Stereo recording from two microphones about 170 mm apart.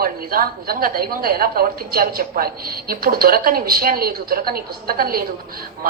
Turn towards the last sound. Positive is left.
turn(degrees=-60)  # may be behind; listen again after turning